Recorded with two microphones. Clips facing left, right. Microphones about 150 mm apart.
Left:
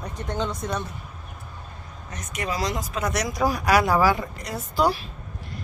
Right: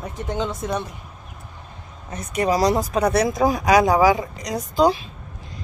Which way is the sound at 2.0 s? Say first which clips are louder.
Right 9 dB; 30° right (ahead or behind).